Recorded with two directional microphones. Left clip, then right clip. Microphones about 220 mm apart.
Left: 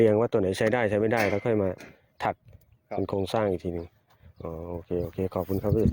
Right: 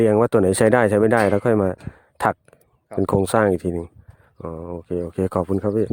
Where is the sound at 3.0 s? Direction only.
45° right (ahead or behind).